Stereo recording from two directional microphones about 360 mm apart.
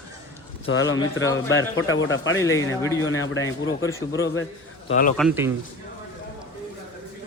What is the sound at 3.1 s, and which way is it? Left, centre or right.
Speech, left.